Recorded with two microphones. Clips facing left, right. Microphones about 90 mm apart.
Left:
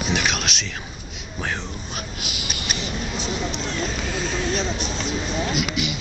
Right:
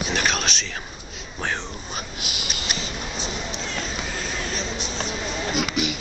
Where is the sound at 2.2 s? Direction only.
30° right (ahead or behind).